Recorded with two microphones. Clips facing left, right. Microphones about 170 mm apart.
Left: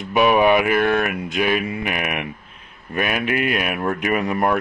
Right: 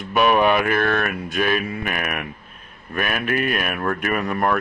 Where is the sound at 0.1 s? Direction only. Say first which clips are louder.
Left 2 dB; 15° left (ahead or behind).